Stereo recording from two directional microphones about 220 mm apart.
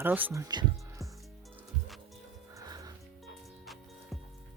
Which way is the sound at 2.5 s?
15° right (ahead or behind).